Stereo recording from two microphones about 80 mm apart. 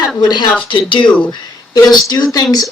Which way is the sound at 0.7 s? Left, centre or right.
Left.